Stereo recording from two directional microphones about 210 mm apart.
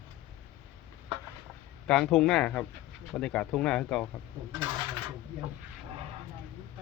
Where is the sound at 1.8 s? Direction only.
5° left (ahead or behind).